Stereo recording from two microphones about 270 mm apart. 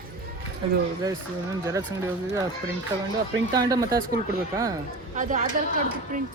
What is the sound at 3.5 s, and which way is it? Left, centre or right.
Speech, centre.